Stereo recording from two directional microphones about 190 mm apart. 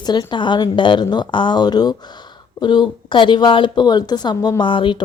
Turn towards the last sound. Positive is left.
turn(degrees=25)  # may be behind; listen again after turning